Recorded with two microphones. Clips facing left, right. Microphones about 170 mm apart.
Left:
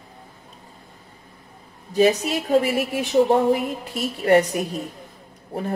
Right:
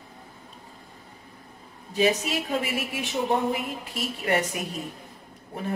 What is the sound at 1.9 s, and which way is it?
A woman's voice, 40° left (ahead or behind).